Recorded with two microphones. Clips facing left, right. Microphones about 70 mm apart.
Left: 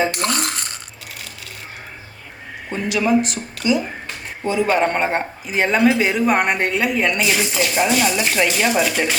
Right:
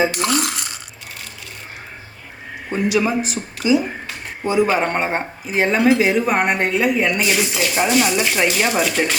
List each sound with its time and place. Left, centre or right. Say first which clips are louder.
0.1 s cutlery: right 2 dB; left
2.6 s speech: right 1 dB; centre
4.4 s speech: even; centre